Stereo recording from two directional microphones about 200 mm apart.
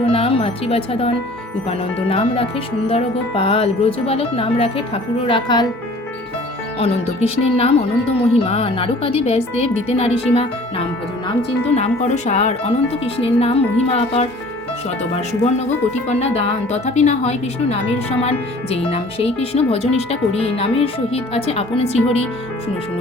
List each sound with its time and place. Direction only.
0.0 s music: 30° left (ahead or behind)
2.0 s speech: 30° left (ahead or behind)
6.7 s music: 30° left (ahead or behind)
13.1 s speech: 30° left (ahead or behind)
15.1 s music: 30° left (ahead or behind)
18.2 s speech: 30° left (ahead or behind)